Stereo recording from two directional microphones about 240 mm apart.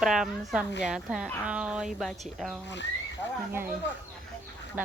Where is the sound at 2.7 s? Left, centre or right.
Left.